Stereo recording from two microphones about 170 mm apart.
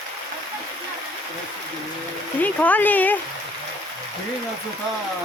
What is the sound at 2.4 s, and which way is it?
Speech, 10° left (ahead or behind).